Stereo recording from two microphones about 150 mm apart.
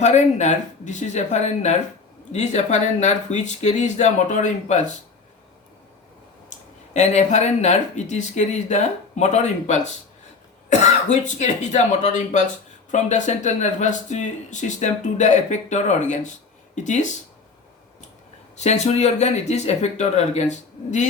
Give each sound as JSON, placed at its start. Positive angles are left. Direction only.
{"t": 0.0, "sound": "speech", "side_deg": 50}
{"t": 6.5, "sound": "speech", "side_deg": 50}
{"t": 18.5, "sound": "speech", "side_deg": 50}